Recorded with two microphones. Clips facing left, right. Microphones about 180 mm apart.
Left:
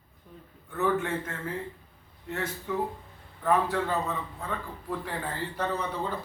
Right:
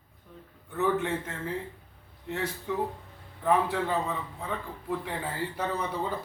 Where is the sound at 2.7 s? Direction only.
20° right (ahead or behind).